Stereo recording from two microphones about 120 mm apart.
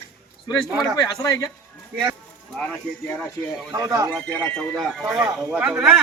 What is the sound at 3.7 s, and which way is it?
Speech, 30° right (ahead or behind).